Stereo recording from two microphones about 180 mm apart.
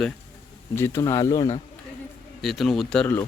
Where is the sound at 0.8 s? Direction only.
15° left (ahead or behind).